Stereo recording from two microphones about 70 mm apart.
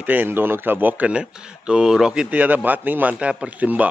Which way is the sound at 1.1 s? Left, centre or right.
Centre.